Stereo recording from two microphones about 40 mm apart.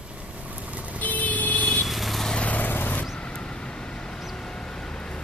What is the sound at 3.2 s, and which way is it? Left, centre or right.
Vehicle, left.